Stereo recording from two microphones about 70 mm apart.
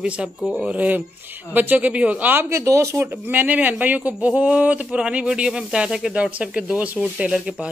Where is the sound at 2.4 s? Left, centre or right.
Right.